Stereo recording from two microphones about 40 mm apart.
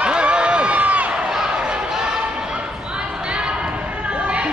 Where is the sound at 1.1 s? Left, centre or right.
Centre.